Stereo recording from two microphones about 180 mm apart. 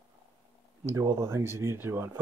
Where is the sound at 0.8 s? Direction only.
15° right (ahead or behind).